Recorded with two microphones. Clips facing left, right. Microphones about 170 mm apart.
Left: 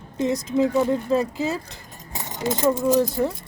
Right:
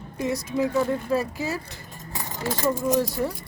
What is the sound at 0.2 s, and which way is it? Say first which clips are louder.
Speech: left 4 dB; 20° left (ahead or behind).